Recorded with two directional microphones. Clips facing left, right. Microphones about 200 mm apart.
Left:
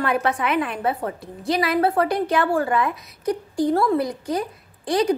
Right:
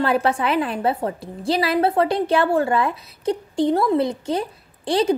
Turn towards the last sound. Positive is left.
turn(degrees=-30)  # may be behind; listen again after turning